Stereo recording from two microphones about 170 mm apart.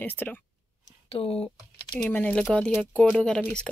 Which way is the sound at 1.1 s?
35° left (ahead or behind).